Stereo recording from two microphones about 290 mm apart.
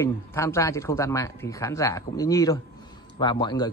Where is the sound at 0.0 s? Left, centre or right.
Centre.